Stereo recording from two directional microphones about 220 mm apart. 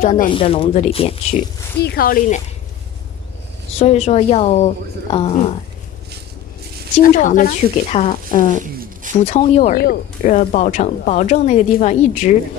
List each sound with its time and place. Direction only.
0.0 s speech: 35° left (ahead or behind)
0.3 s a woman's voice: 25° left (ahead or behind)
1.8 s speech: 45° left (ahead or behind)
3.7 s a woman's voice: 30° left (ahead or behind)
7.0 s a woman's voice: 35° left (ahead or behind)